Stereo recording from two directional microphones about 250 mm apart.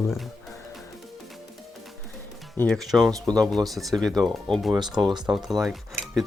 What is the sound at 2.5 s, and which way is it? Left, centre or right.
Speech, centre.